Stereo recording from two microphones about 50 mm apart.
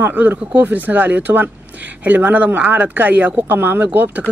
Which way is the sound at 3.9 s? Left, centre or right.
Right.